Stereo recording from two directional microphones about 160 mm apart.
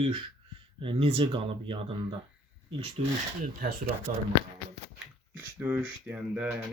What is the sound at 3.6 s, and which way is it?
Speech, 70° right (ahead or behind).